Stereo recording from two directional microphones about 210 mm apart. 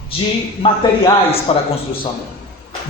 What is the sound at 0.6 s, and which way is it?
Speech, 25° left (ahead or behind).